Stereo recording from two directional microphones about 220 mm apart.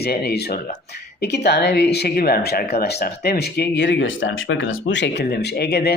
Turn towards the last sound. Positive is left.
turn(degrees=45)  # may be behind; listen again after turning